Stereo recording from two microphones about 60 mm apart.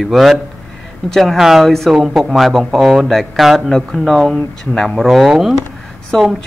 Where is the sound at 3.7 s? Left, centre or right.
Centre.